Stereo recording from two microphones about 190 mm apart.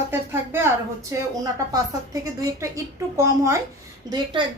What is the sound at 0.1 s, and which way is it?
Music, 10° right (ahead or behind).